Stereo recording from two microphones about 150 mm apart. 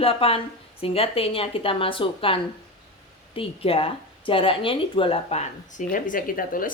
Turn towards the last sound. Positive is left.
turn(degrees=70)  # may be behind; listen again after turning